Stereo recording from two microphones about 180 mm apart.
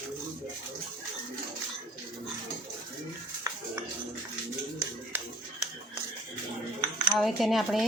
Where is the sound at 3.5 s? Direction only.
20° right (ahead or behind).